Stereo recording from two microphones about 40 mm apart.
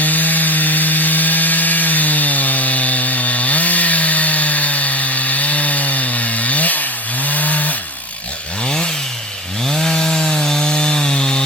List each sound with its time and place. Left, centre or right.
0.0 s sawing: left
8.6 s chainsaw: left
9.6 s wood: centre